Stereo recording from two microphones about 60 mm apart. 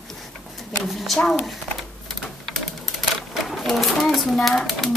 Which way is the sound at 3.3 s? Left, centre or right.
Centre.